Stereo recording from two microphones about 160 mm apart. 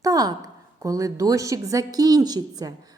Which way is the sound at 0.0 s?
20° right (ahead or behind).